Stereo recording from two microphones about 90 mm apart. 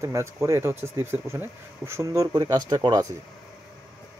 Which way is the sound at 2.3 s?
50° right (ahead or behind).